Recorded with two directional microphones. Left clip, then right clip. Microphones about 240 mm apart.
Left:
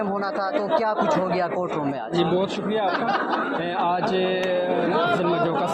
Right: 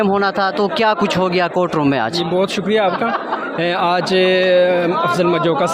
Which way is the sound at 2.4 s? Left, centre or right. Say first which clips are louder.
Right 8 dB; right.